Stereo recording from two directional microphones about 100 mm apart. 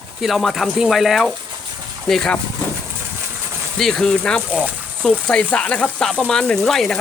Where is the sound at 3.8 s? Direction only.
5° left (ahead or behind).